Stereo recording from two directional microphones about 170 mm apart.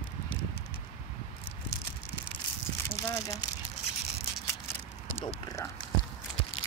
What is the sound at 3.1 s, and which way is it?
Speech, 20° left (ahead or behind).